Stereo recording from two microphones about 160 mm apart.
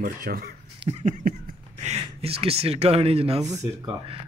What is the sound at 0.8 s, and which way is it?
Speech, 40° right (ahead or behind).